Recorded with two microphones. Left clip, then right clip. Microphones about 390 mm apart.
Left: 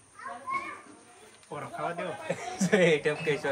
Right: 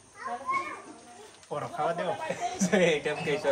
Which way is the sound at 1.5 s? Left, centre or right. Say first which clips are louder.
Right 5 dB; centre.